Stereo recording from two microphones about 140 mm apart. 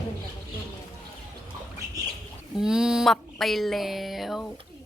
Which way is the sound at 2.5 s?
5° right (ahead or behind).